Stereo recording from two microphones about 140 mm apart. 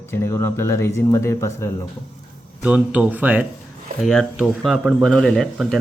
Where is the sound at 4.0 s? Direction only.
Centre (ahead or behind).